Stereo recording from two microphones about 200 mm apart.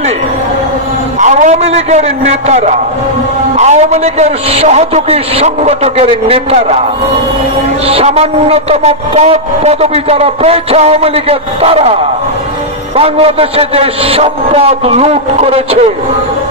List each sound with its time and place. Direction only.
1.2 s a man's voice: 35° right (ahead or behind)
7.8 s a man's voice: 30° right (ahead or behind)
12.9 s a man's voice: 30° right (ahead or behind)